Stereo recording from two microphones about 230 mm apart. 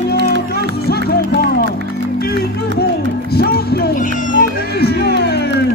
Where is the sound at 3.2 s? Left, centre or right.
Left.